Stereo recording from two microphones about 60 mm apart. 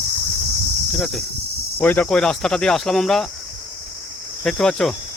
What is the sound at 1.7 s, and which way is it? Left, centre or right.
Speech, left.